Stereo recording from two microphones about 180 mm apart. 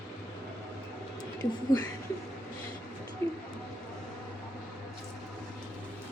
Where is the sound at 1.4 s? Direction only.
20° left (ahead or behind).